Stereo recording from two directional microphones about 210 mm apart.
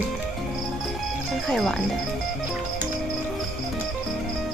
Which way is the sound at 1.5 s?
Centre (ahead or behind).